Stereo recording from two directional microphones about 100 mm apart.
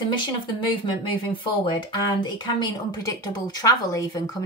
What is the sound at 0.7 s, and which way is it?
Speech, 55° left (ahead or behind).